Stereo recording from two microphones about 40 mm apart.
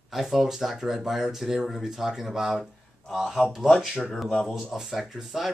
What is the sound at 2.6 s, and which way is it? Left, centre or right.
Speech, centre.